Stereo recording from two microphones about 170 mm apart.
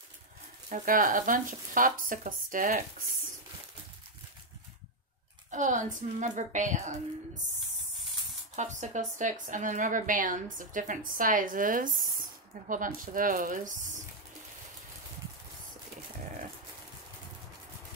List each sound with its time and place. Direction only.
0.7 s speech: 50° right (ahead or behind)
5.5 s speech: 45° right (ahead or behind)
8.5 s speech: 45° right (ahead or behind)